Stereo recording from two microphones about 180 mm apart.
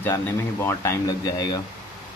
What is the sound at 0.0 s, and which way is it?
Speech, 15° left (ahead or behind).